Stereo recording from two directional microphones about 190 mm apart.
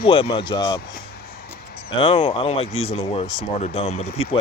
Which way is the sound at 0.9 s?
55° left (ahead or behind).